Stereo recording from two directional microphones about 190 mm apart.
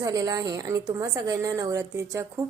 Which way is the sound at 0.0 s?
20° right (ahead or behind).